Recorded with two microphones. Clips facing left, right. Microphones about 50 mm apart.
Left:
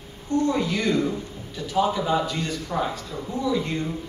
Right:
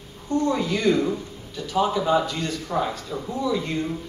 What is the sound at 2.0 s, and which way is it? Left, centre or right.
Speech, centre.